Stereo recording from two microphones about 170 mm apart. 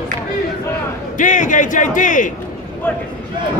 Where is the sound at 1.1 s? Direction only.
50° left (ahead or behind).